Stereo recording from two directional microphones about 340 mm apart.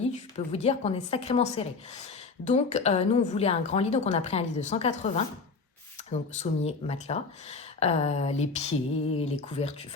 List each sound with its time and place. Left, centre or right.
0.3 s a woman's voice: centre